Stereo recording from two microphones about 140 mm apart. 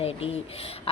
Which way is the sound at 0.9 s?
45° left (ahead or behind).